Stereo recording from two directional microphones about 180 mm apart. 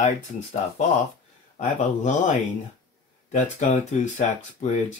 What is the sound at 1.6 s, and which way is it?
Speech, 45° left (ahead or behind).